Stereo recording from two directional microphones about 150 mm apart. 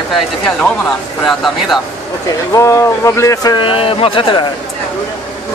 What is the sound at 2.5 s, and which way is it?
Speech, 20° left (ahead or behind).